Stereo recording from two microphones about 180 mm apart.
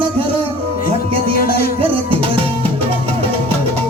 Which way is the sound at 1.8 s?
30° right (ahead or behind).